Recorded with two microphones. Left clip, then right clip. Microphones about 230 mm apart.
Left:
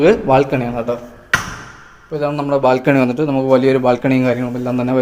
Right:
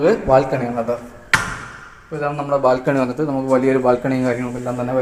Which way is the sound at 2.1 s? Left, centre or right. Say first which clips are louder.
Left 3 dB; left.